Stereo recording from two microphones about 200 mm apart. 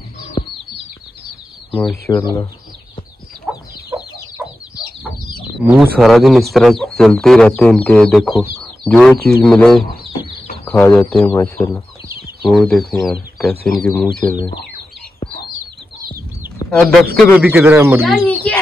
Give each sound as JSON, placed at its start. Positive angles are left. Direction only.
{"t": 1.7, "sound": "speech", "side_deg": 10}
{"t": 5.7, "sound": "speech", "side_deg": 0}
{"t": 12.4, "sound": "speech", "side_deg": 0}
{"t": 16.6, "sound": "chicken", "side_deg": 25}
{"t": 17.4, "sound": "speech", "side_deg": -10}
{"t": 18.0, "sound": "chicken", "side_deg": 5}